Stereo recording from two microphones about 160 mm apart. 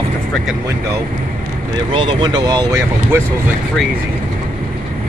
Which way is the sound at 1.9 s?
30° right (ahead or behind).